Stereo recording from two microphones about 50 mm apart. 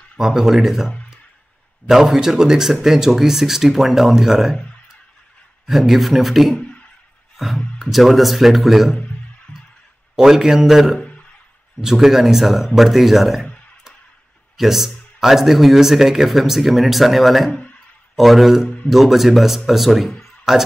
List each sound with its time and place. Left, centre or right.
0.2 s speech: centre
1.9 s speech: centre
5.7 s speech: centre
6.5 s a sound: centre
7.9 s speech: centre
9.5 s music: left
10.1 s speech: centre
14.6 s speech: centre
20.2 s music: centre